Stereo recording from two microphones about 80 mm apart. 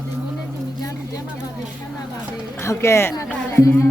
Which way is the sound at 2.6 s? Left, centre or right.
Left.